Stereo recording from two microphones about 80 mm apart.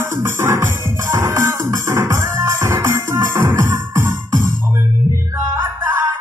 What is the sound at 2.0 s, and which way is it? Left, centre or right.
Music, right.